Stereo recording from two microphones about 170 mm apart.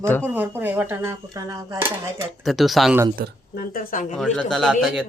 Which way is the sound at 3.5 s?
60° left (ahead or behind).